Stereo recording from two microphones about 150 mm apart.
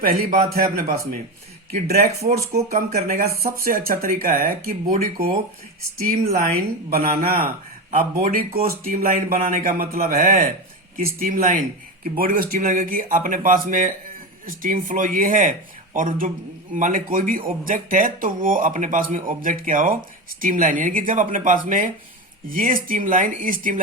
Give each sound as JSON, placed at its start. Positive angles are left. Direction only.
{"t": 0.0, "sound": "speech", "side_deg": -70}
{"t": 2.6, "sound": "speech", "side_deg": -70}
{"t": 6.0, "sound": "speech", "side_deg": -90}
{"t": 6.9, "sound": "speech", "side_deg": -70}